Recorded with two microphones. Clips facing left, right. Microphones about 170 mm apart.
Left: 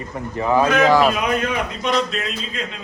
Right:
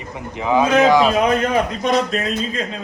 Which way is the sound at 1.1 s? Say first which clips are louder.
Right 5 dB; 35° right (ahead or behind).